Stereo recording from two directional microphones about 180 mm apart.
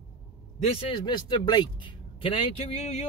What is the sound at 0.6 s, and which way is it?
Speech, 30° left (ahead or behind).